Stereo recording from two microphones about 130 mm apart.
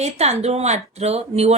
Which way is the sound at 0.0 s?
55° right (ahead or behind).